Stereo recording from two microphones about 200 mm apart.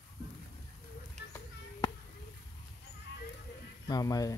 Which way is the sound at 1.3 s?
20° left (ahead or behind).